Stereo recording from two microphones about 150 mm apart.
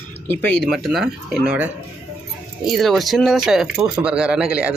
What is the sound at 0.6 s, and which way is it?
Speech, centre (ahead or behind).